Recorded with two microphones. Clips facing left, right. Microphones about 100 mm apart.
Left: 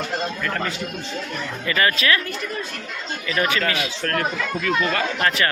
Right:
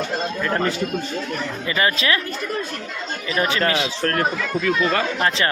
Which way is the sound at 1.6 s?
20° right (ahead or behind).